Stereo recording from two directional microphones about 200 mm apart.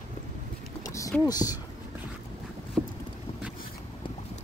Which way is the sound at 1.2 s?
20° left (ahead or behind).